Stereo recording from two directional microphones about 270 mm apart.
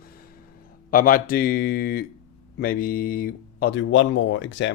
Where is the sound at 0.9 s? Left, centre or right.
Left.